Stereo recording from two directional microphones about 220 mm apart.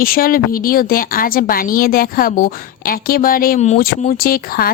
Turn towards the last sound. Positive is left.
turn(degrees=40)  # may be behind; listen again after turning